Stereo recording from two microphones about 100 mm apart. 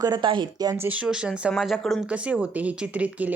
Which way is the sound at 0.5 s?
40° right (ahead or behind).